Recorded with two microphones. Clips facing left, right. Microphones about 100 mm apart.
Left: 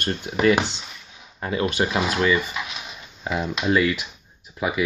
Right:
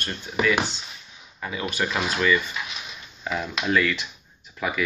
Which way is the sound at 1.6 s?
30° left (ahead or behind).